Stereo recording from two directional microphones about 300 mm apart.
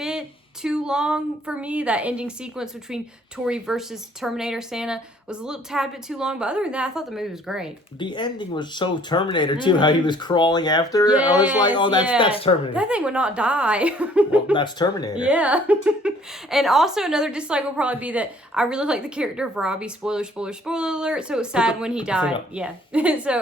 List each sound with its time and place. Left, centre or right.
0.0 s speech: centre
7.9 s speech: centre
12.7 s speech: centre
14.5 s speech: centre
15.2 s speech: centre